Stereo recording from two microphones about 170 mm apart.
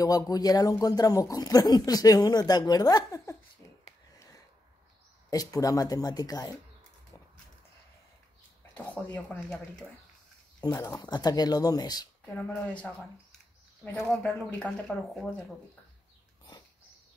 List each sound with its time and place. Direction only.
0.0 s speech: 20° left (ahead or behind)
5.3 s speech: 20° left (ahead or behind)
8.7 s speech: 10° left (ahead or behind)
10.6 s speech: 20° left (ahead or behind)
12.4 s speech: 10° left (ahead or behind)
13.9 s speech: centre (ahead or behind)